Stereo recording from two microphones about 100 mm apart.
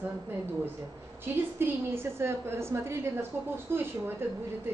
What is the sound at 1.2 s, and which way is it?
A woman's voice, 25° right (ahead or behind).